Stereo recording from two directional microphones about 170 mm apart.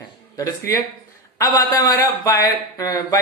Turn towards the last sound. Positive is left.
turn(degrees=20)  # may be behind; listen again after turning